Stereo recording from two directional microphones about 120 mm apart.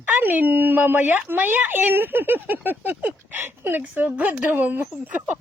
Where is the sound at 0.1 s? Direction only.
15° right (ahead or behind).